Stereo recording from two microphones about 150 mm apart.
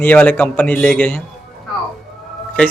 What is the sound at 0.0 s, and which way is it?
A man's voice, 10° left (ahead or behind).